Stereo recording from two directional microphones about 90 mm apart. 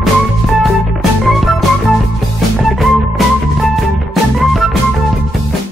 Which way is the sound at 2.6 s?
Centre (ahead or behind).